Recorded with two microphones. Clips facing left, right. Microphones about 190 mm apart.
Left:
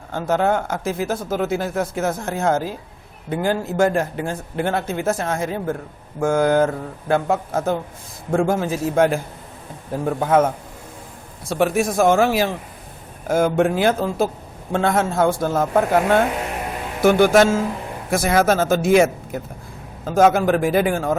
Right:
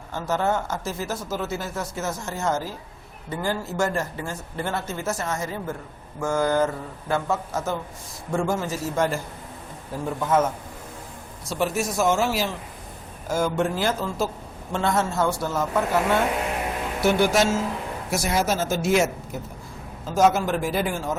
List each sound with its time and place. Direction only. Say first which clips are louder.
0.1 s speech: left 5 dB; 55° left (ahead or behind)